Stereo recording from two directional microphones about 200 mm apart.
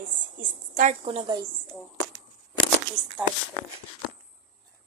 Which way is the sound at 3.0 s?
20° right (ahead or behind).